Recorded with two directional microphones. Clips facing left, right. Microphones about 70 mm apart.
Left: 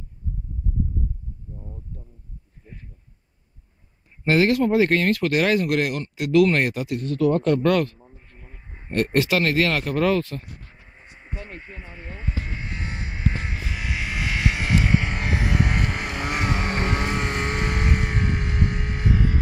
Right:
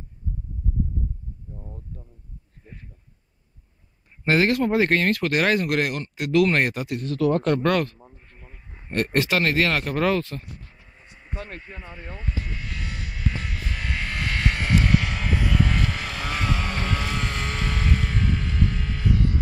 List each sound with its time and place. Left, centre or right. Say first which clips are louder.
4.2 s speech: left 2 dB; right
7.1 s speech: left 1 dB; right
8.5 s a sound: left 3 dB; left
9.5 s speech: left 1 dB; centre
11.0 s a sound: left 2 dB; left
11.4 s vehicle: right 1 dB; left
13.7 s vehicle: right 1 dB; centre
15.0 s vehicle: left 1 dB; left